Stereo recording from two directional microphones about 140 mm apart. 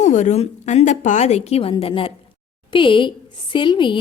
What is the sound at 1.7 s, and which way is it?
A woman's voice, 35° left (ahead or behind).